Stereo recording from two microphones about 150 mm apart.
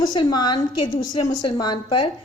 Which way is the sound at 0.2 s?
30° left (ahead or behind).